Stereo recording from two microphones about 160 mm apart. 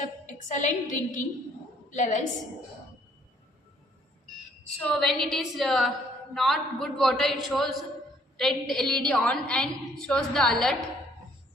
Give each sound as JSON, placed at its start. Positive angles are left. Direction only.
{"t": 0.3, "sound": "a woman's voice", "side_deg": 50}
{"t": 4.8, "sound": "a woman's voice", "side_deg": 5}